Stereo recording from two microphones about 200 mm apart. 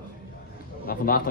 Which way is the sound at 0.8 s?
45° left (ahead or behind).